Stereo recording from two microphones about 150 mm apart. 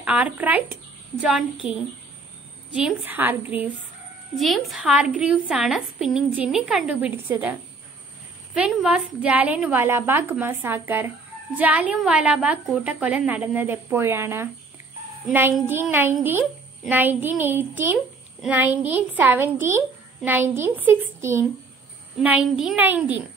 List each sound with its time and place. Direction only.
0.0 s speech: 10° right (ahead or behind)
2.7 s speech: 10° right (ahead or behind)
4.4 s a woman's voice: centre (ahead or behind)
8.5 s speech: 5° right (ahead or behind)
15.6 s a child's voice: 15° right (ahead or behind)
18.7 s speech: 45° right (ahead or behind)
18.9 s speech: 10° right (ahead or behind)
22.2 s speech: 5° right (ahead or behind)